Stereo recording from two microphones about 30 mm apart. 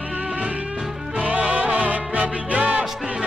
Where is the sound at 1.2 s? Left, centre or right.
Right.